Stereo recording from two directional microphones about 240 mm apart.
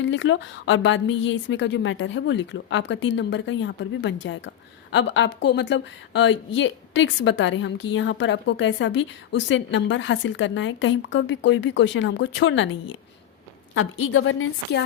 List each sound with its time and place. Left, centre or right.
0.0 s a woman's voice: left
13.7 s a woman's voice: left